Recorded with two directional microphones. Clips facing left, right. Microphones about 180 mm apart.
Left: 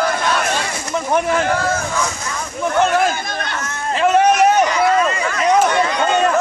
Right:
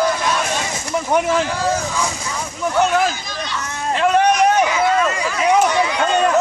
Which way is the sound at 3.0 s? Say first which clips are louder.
Left 2 dB; 55° left (ahead or behind).